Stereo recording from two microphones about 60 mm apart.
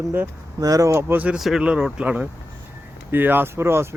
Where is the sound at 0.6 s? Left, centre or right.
Right.